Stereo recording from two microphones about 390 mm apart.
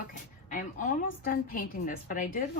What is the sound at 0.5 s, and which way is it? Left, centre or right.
Speech, centre.